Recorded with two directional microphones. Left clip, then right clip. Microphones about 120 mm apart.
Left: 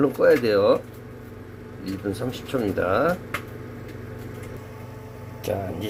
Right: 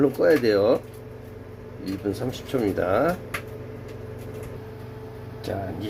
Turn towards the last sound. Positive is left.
turn(degrees=20)  # may be behind; listen again after turning